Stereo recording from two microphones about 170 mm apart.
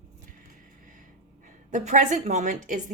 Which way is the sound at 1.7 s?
45° right (ahead or behind).